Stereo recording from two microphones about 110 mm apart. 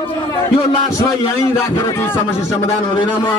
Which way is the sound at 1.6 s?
20° left (ahead or behind).